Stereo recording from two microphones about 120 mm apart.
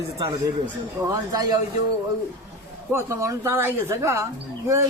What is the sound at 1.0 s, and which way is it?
Speech, 30° right (ahead or behind).